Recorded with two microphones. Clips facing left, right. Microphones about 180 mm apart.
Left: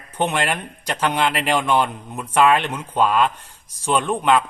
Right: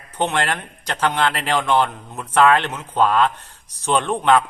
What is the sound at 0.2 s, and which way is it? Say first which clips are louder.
A man's voice: even; 10° left (ahead or behind).